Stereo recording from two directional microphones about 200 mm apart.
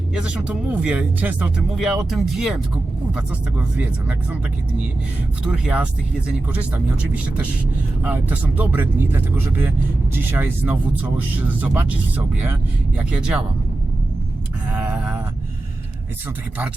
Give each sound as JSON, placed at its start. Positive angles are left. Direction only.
{"t": 0.1, "sound": "speech", "side_deg": -5}
{"t": 5.5, "sound": "speech", "side_deg": -5}
{"t": 8.0, "sound": "speech", "side_deg": -10}
{"t": 14.7, "sound": "a sound", "side_deg": -5}